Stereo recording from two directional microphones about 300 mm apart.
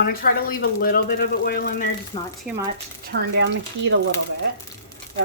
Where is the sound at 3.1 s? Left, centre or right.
Right.